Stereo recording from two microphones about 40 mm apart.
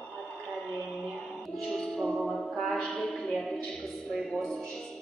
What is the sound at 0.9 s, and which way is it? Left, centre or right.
Music, centre.